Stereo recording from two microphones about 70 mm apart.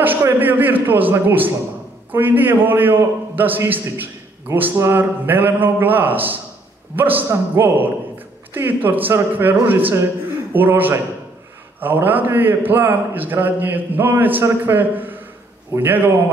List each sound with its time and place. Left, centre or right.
0.2 s a man's voice: right